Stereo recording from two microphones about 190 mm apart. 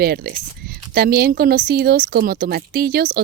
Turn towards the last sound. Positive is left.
turn(degrees=-55)  # may be behind; listen again after turning